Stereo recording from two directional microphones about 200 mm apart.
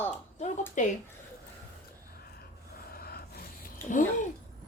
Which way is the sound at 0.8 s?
40° left (ahead or behind).